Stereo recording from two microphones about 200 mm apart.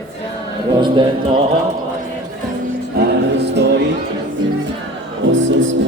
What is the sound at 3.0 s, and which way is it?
Music, 60° right (ahead or behind).